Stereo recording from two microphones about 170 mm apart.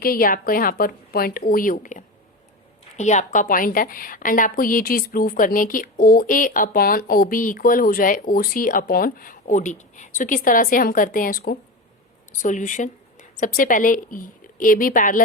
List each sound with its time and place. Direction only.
0.0 s a woman's voice: 60° left (ahead or behind)